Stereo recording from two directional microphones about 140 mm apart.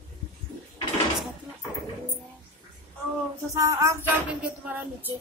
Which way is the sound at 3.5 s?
25° right (ahead or behind).